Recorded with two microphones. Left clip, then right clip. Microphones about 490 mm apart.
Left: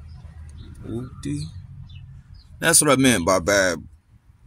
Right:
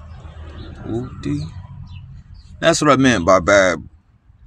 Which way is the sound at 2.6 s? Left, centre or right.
Left.